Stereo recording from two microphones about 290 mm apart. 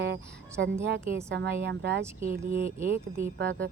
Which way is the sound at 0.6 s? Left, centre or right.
Right.